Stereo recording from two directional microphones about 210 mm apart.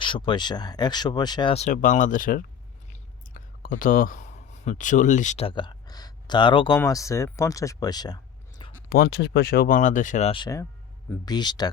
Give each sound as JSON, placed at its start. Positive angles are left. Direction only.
{"t": 0.0, "sound": "speech", "side_deg": 25}
{"t": 3.6, "sound": "speech", "side_deg": 40}
{"t": 8.9, "sound": "speech", "side_deg": 50}